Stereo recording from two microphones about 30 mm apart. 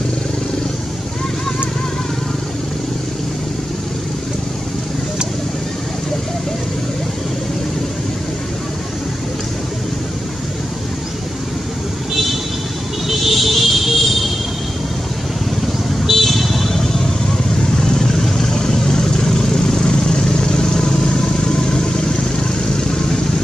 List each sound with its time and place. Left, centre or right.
13.3 s music: centre
16.1 s vehicle: centre; by 23.2 s left